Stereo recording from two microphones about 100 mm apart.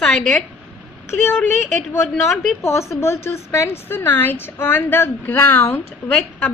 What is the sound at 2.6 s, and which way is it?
A woman's voice, 25° left (ahead or behind).